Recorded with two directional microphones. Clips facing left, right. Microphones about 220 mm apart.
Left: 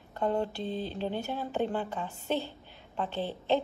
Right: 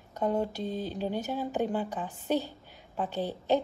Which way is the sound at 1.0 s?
10° right (ahead or behind).